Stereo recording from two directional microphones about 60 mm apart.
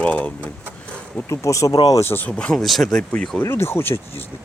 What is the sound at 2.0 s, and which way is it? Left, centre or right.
Speech, left.